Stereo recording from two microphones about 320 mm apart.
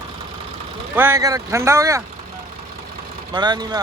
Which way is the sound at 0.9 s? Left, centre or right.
Centre.